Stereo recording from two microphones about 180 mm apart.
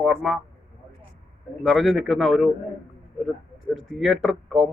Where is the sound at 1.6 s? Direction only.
Centre (ahead or behind).